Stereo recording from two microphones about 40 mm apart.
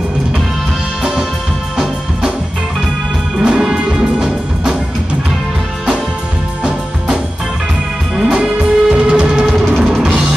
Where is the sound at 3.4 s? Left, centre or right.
Centre.